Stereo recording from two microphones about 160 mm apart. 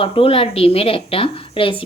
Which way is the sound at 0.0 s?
35° left (ahead or behind).